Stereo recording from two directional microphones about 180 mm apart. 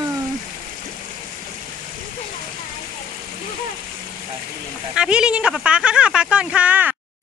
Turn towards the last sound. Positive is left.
turn(degrees=-10)  # may be behind; listen again after turning